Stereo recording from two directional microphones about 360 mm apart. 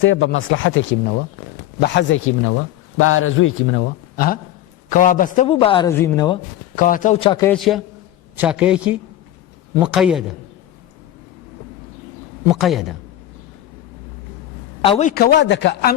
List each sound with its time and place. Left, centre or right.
0.0 s a man's voice: left; by 6.4 s centre
6.7 s a man's voice: left; by 10.3 s centre
12.5 s a man's voice: centre
14.8 s a man's voice: centre